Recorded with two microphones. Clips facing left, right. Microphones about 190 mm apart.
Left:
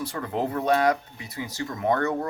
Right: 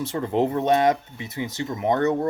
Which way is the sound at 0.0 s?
25° right (ahead or behind).